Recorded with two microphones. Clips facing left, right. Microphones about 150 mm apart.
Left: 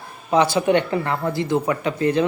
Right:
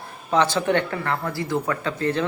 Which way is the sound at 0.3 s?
10° left (ahead or behind).